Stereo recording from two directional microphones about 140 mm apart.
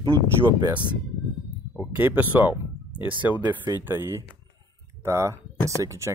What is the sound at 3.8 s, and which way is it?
Speech, 15° right (ahead or behind).